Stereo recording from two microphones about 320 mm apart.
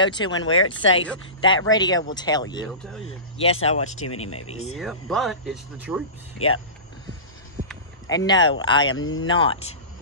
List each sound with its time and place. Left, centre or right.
0.0 s speech: centre
0.5 s speech: left
1.4 s speech: centre
2.8 s speech: centre
3.8 s speech: left
4.5 s speech: centre
4.7 s speech: centre
6.3 s speech: left
8.1 s speech: centre
8.9 s speech: left
9.3 s speech: centre